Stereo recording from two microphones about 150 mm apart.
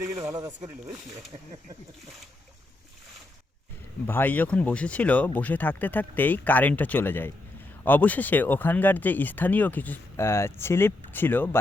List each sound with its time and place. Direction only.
0.2 s speech: 25° right (ahead or behind)
4.0 s speech: 15° left (ahead or behind)